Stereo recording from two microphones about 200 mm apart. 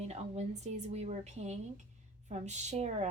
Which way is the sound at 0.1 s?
30° right (ahead or behind).